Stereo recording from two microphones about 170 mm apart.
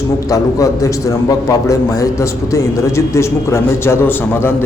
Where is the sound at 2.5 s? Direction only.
15° left (ahead or behind).